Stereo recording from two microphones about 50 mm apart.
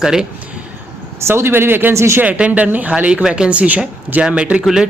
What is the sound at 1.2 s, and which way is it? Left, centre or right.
Speech, right.